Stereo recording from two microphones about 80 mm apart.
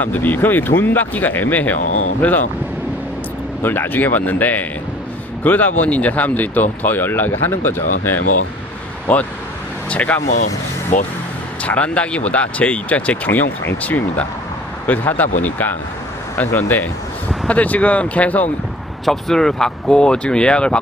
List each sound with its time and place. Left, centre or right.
0.0 s speech: left
3.6 s speech: left
11.6 s speech: centre
19.0 s speech: centre